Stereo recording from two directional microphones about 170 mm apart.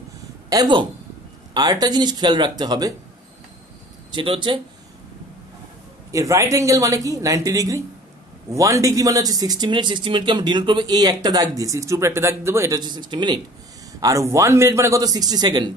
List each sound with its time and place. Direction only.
0.5 s speech: 25° right (ahead or behind)
4.1 s speech: 30° right (ahead or behind)
6.1 s speech: 20° right (ahead or behind)